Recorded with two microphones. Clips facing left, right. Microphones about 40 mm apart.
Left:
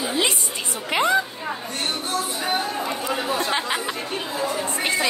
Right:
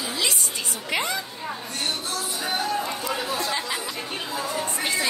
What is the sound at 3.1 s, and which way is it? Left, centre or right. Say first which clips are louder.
Speech: left 5 dB; left.